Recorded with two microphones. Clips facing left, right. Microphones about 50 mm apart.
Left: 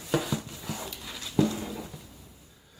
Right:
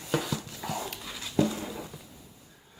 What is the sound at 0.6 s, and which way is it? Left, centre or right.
Dog, right.